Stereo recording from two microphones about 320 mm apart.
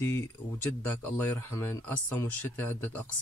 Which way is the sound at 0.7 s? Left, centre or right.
Centre.